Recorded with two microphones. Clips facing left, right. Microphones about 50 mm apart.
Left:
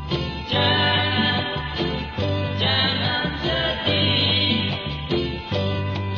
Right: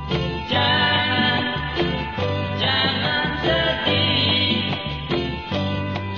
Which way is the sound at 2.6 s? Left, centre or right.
Centre.